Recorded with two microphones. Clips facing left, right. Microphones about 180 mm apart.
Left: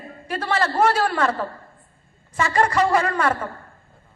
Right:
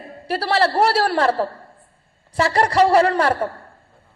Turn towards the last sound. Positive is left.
turn(degrees=-35)  # may be behind; listen again after turning